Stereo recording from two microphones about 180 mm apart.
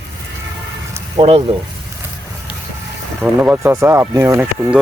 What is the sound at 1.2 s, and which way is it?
Speech, 40° right (ahead or behind).